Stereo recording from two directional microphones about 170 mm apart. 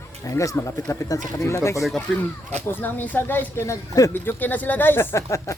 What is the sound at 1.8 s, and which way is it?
Speech, 5° left (ahead or behind).